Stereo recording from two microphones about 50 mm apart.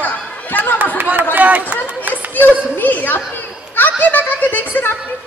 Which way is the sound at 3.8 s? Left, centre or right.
Left.